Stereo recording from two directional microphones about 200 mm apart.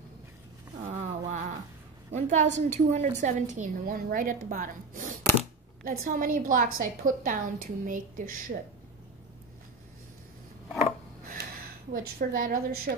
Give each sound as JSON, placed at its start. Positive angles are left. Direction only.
{"t": 0.8, "sound": "a sound", "side_deg": -35}
{"t": 2.1, "sound": "a woman's voice", "side_deg": -35}
{"t": 11.9, "sound": "a woman's voice", "side_deg": -45}